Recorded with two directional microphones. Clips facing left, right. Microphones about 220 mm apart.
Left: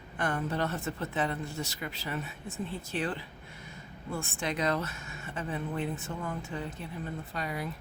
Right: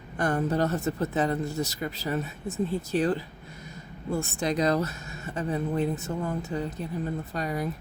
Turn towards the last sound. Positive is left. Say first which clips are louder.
# right 6 dB
turn(degrees=-40)  # may be behind; listen again after turning